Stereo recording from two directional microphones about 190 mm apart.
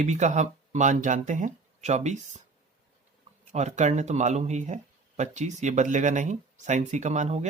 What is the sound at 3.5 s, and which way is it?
Speech, 40° right (ahead or behind).